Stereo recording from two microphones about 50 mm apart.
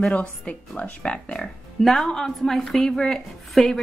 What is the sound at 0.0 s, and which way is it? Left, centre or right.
Speech, left.